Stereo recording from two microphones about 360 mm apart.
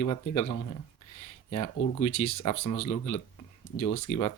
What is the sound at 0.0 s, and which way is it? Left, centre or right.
Speech, left.